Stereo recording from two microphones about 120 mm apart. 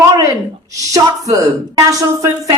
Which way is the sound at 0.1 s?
30° right (ahead or behind).